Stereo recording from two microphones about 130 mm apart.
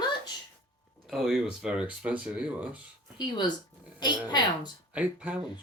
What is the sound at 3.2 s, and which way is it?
A woman's voice, 35° left (ahead or behind).